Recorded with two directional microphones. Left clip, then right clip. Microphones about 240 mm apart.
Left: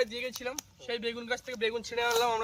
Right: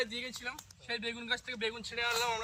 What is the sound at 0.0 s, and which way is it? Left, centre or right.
Speech, centre.